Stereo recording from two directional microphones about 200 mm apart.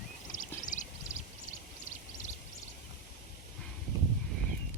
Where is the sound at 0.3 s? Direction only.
40° left (ahead or behind).